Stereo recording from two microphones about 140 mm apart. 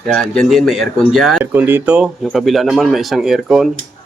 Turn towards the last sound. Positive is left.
turn(degrees=0)  # may be behind; listen again after turning